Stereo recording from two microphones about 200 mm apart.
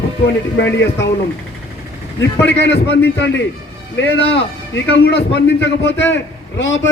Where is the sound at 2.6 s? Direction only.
60° left (ahead or behind).